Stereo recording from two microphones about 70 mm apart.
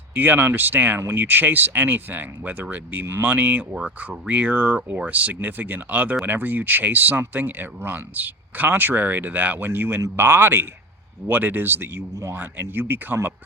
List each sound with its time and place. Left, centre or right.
0.1 s speech: right